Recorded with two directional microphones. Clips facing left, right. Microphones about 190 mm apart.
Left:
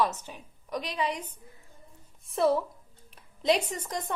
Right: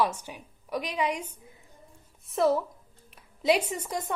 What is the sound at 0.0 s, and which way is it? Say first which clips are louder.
A woman's voice: right 1 dB; 10° right (ahead or behind).